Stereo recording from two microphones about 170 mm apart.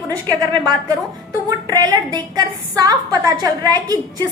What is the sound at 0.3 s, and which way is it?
A woman's voice, 25° right (ahead or behind).